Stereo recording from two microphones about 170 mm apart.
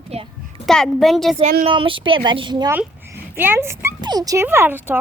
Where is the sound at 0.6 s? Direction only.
Centre (ahead or behind).